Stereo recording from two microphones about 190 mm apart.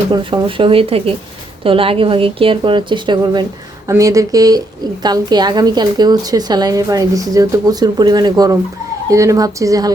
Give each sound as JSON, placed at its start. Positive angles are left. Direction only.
{"t": 0.1, "sound": "a woman's voice", "side_deg": -25}